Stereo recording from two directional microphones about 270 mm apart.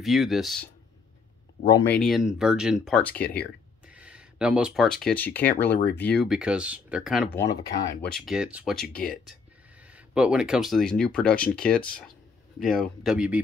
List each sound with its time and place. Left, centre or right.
0.0 s speech: centre
1.7 s speech: centre
7.3 s speech: centre
12.6 s speech: left
13.0 s speech: centre